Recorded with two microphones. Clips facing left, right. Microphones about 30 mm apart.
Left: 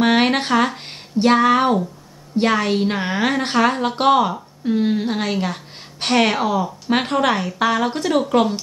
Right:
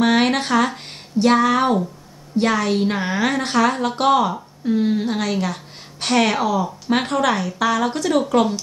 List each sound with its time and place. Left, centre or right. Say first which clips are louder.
0.0 s a sound: left 1 dB; left
2.3 s a woman's voice: left 1 dB; left
8.1 s a woman's voice: even; centre